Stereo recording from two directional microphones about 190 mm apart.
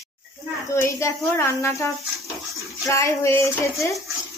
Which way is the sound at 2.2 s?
Centre (ahead or behind).